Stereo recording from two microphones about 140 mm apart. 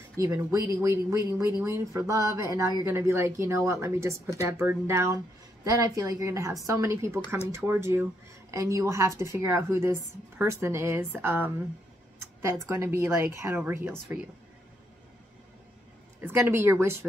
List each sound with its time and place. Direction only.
0.2 s a woman's voice: 25° right (ahead or behind)
12.6 s a woman's voice: 20° right (ahead or behind)
16.2 s a woman's voice: 15° right (ahead or behind)